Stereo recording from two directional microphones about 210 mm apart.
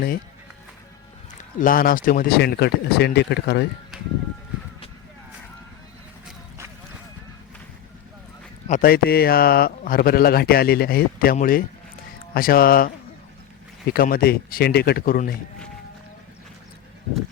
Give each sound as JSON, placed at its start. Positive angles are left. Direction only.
{"t": 1.5, "sound": "speech", "side_deg": 40}
{"t": 3.9, "sound": "music", "side_deg": 0}
{"t": 8.6, "sound": "speech", "side_deg": 40}
{"t": 13.9, "sound": "speech", "side_deg": 45}